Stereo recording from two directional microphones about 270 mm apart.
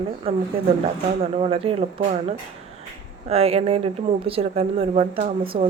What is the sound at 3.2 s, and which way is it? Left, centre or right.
Speech, right.